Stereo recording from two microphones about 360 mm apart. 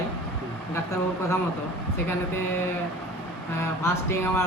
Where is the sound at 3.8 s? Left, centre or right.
Centre.